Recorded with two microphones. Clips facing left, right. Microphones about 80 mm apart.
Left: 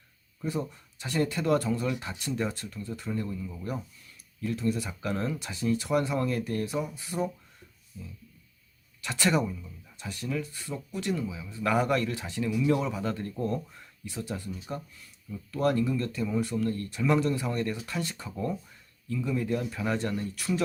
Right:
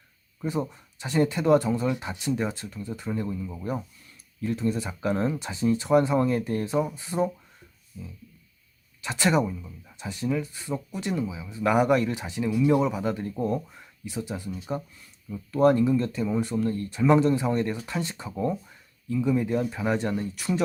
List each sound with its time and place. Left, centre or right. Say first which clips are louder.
0.4 s speech: right 3 dB; right
9.0 s speech: right 3 dB; right